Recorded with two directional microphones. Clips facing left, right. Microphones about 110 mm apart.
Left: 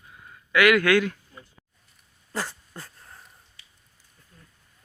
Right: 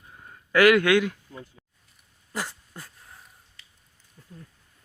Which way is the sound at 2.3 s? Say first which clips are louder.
Left 1 dB; 15° right (ahead or behind).